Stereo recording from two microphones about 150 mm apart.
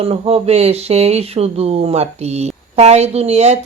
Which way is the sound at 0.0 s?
45° right (ahead or behind).